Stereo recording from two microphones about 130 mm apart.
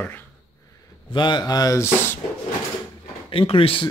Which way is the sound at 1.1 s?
35° left (ahead or behind).